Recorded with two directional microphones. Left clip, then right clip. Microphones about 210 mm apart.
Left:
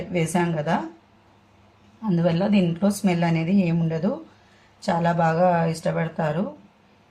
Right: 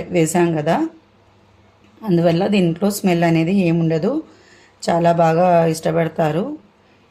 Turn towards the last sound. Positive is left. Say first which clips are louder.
# right 7 dB
turn(degrees=-35)  # may be behind; listen again after turning